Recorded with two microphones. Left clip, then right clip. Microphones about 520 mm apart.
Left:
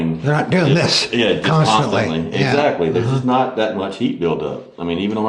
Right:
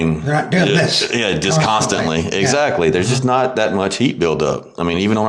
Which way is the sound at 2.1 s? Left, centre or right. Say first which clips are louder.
Right 2 dB; right.